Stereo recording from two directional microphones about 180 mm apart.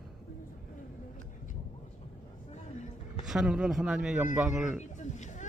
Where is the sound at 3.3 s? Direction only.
5° right (ahead or behind).